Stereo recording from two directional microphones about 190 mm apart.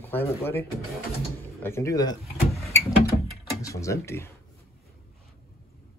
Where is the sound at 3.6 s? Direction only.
15° left (ahead or behind).